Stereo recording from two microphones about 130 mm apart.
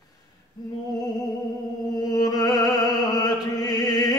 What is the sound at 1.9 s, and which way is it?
Music, 30° left (ahead or behind).